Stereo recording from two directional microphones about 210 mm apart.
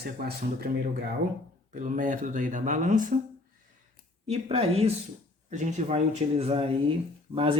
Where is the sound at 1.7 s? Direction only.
40° right (ahead or behind).